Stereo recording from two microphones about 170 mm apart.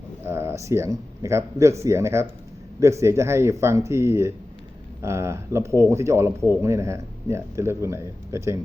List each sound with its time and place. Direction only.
0.3 s speech: 15° right (ahead or behind)